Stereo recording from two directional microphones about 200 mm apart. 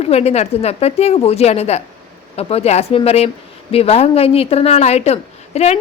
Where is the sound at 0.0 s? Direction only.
30° left (ahead or behind).